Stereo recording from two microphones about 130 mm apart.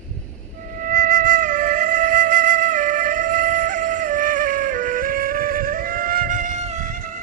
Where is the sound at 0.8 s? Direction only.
90° right.